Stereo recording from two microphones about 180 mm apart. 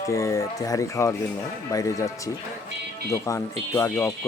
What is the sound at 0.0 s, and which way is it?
Speech, 15° left (ahead or behind).